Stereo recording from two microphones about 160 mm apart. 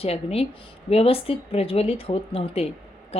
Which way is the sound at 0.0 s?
40° left (ahead or behind).